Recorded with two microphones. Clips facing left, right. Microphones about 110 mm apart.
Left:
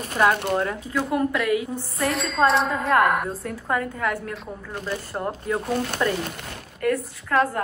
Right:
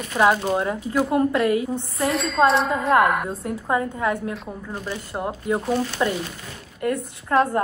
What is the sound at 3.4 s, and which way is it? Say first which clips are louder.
A woman's voice: right 3 dB; 25° right (ahead or behind).